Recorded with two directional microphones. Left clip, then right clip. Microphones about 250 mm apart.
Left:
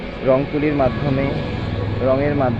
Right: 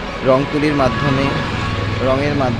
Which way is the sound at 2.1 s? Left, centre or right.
Centre.